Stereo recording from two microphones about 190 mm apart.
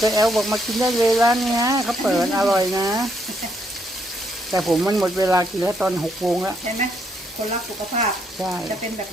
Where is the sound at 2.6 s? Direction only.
20° right (ahead or behind).